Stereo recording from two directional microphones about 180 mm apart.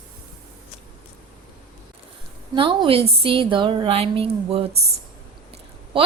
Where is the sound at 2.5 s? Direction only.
30° right (ahead or behind).